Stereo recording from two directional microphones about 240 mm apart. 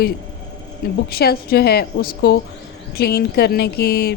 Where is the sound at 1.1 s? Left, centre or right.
Left.